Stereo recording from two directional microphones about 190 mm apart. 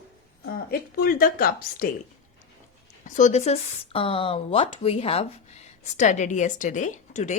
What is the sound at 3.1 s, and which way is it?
Speech, 40° left (ahead or behind).